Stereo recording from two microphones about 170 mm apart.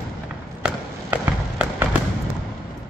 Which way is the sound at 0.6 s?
5° right (ahead or behind).